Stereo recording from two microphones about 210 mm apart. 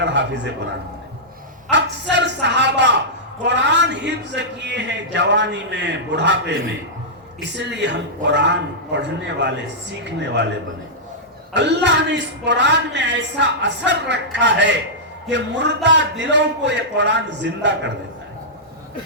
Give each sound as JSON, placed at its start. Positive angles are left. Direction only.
{"t": 0.0, "sound": "speech", "side_deg": -55}
{"t": 1.7, "sound": "speech", "side_deg": -55}
{"t": 7.5, "sound": "speech", "side_deg": -55}
{"t": 11.5, "sound": "speech", "side_deg": -55}